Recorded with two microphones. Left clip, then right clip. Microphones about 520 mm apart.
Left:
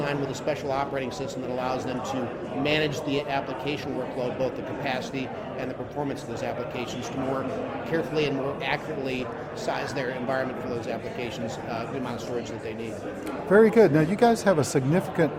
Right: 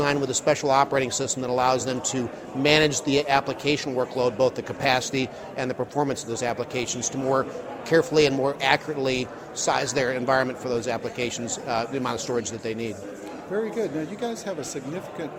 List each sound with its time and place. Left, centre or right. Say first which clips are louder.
0.0 s speech: right 5 dB; right
7.9 s a man's voice: right 8 dB; right
13.5 s speech: left 10 dB; left